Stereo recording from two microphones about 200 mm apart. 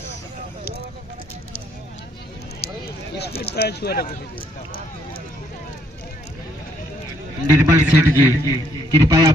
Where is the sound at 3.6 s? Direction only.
55° left (ahead or behind).